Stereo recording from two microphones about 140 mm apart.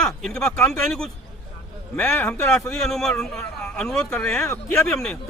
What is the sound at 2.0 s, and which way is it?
Speech, 15° left (ahead or behind).